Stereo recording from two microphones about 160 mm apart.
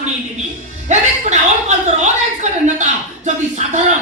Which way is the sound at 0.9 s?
50° right (ahead or behind).